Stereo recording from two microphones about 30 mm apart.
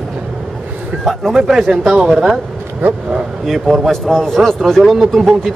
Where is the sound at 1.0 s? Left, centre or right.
Centre.